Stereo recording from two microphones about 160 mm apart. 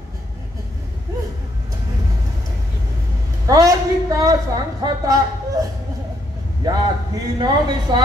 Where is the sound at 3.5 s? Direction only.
20° right (ahead or behind).